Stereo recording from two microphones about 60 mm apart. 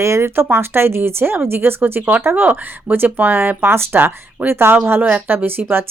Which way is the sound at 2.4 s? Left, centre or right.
Right.